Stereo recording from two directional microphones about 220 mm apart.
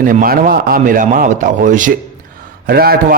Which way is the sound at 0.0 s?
40° right (ahead or behind).